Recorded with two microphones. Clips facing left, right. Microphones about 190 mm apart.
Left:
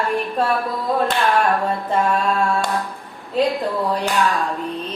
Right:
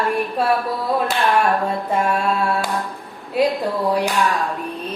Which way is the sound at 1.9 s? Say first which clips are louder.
Left 1 dB; 10° right (ahead or behind).